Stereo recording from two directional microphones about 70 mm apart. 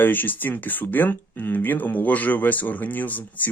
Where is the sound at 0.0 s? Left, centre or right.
Left.